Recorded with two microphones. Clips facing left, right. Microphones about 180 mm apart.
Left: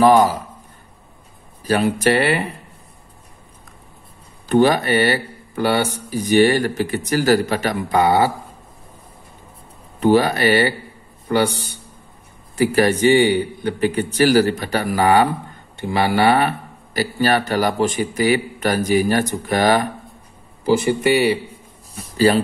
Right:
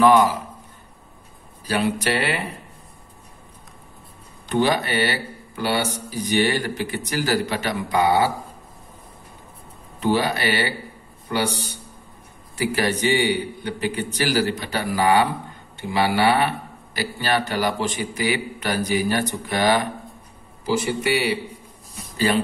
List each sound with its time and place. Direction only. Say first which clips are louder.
0.0 s a man's voice: left 3 dB; 35° left (ahead or behind)
1.7 s speech: left 5 dB; 45° left (ahead or behind)
4.5 s speech: left 6 dB; 50° left (ahead or behind)
9.9 s speech: left 6 dB; 45° left (ahead or behind)
12.5 s speech: left 7 dB; 50° left (ahead or behind)
21.9 s a man's voice: left 6 dB; 35° left (ahead or behind)